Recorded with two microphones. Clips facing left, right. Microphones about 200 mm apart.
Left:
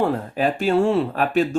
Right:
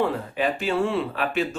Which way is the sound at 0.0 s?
45° left (ahead or behind).